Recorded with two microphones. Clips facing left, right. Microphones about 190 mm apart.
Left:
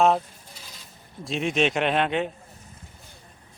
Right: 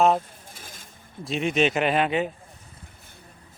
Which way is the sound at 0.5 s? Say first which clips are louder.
Right 1 dB; 50° right (ahead or behind).